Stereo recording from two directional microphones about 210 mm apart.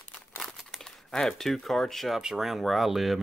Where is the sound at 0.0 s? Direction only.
10° left (ahead or behind).